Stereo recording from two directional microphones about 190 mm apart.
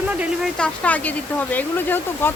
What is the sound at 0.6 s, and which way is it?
Speech, 10° left (ahead or behind).